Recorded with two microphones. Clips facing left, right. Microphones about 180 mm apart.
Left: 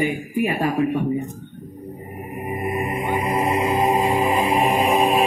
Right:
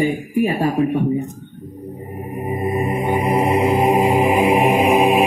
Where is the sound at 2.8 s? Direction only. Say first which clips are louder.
Right 4 dB; 20° right (ahead or behind).